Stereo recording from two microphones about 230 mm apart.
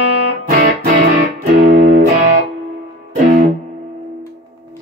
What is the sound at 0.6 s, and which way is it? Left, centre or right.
Music, right.